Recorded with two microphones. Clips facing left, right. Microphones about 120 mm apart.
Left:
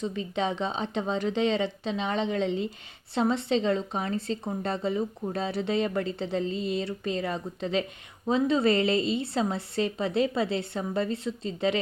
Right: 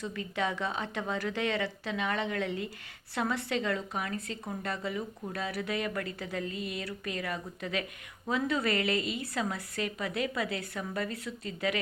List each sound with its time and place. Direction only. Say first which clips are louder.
0.0 s a woman's voice: left 4 dB; 20° left (ahead or behind)